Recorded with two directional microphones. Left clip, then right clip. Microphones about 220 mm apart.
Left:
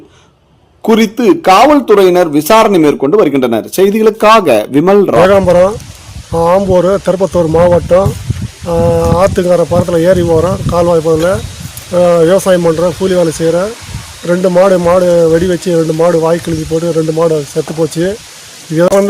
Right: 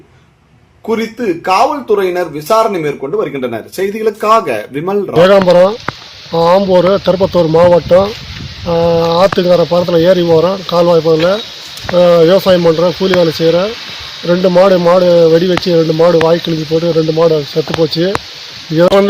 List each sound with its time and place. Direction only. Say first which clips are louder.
0.9 s speech: left 7 dB; 55° left (ahead or behind)
5.2 s speech: right 5 dB; 5° left (ahead or behind)